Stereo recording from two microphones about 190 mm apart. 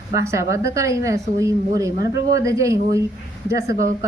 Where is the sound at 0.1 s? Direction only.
15° right (ahead or behind).